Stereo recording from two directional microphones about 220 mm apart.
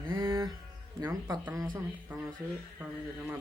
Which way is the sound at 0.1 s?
15° right (ahead or behind).